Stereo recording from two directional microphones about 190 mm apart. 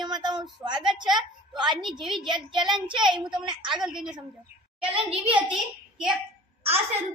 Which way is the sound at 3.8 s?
Centre (ahead or behind).